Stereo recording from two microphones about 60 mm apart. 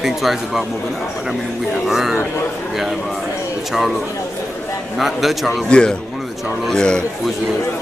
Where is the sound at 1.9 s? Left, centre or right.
Centre.